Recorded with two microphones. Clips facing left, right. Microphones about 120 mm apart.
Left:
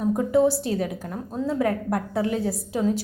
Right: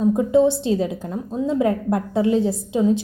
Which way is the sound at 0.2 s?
20° right (ahead or behind).